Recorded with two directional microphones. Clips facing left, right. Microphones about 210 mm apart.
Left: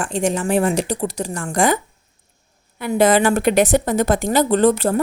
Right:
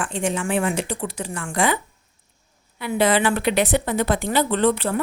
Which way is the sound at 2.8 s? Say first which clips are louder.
Left 4 dB; 45° left (ahead or behind).